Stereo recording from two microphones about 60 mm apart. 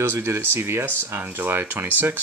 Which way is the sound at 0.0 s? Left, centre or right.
Right.